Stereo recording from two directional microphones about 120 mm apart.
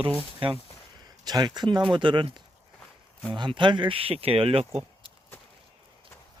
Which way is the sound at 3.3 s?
40° right (ahead or behind).